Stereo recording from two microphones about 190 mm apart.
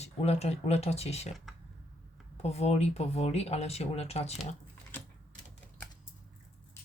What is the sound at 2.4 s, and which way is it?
Speech, 35° left (ahead or behind).